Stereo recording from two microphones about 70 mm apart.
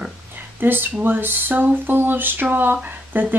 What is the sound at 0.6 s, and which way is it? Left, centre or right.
Speech, right.